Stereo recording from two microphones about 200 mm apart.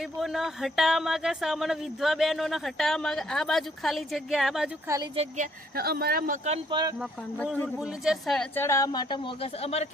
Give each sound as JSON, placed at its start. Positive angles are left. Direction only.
{"t": 0.0, "sound": "speech", "side_deg": 0}
{"t": 5.1, "sound": "a woman's voice", "side_deg": -30}
{"t": 5.7, "sound": "speech", "side_deg": -50}
{"t": 6.7, "sound": "speech", "side_deg": -20}
{"t": 7.0, "sound": "a woman's voice", "side_deg": 5}